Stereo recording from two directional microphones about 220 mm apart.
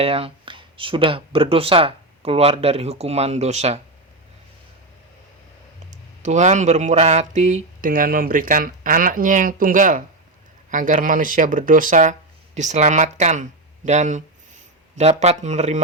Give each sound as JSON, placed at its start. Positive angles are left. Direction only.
{"t": 0.0, "sound": "speech", "side_deg": -25}
{"t": 6.2, "sound": "speech", "side_deg": -30}